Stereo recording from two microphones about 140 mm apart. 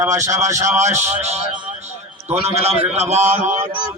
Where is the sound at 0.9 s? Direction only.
55° right (ahead or behind).